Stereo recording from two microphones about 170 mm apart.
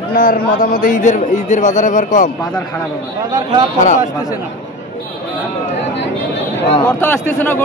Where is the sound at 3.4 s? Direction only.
25° right (ahead or behind).